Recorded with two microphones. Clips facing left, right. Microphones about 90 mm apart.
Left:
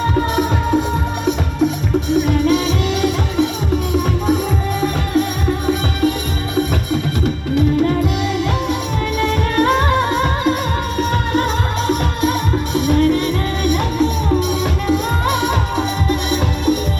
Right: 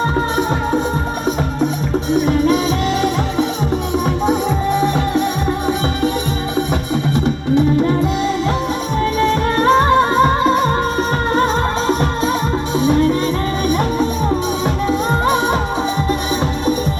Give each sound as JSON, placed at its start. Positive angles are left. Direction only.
{"t": 2.1, "sound": "music", "side_deg": -35}
{"t": 7.5, "sound": "music", "side_deg": -30}
{"t": 12.7, "sound": "music", "side_deg": -30}